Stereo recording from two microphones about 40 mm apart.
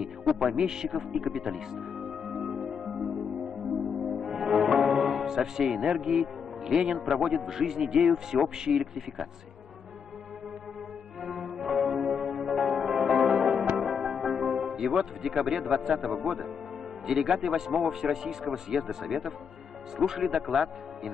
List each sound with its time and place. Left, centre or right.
0.2 s speech: centre
0.9 s music: centre
5.2 s music: centre
5.6 s a man's voice: centre
11.2 s music: centre
17.0 s a man's voice: centre
18.4 s a man's voice: centre